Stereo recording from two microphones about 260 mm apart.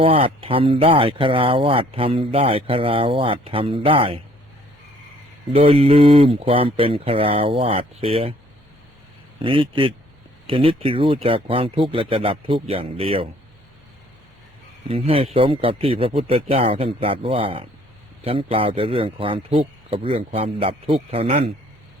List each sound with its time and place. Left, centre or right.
0.0 s speech: right
5.5 s speech: right
9.4 s speech: centre
14.8 s speech: right